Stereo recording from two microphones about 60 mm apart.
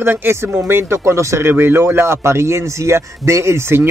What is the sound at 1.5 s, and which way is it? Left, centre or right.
Speech, right.